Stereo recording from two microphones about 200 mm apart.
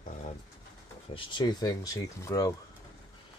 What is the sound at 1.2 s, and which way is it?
Speech, 25° left (ahead or behind).